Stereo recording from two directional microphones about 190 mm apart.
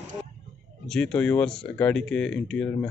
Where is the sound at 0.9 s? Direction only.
5° left (ahead or behind).